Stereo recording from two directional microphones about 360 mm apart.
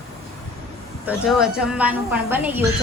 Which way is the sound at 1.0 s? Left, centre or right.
Centre.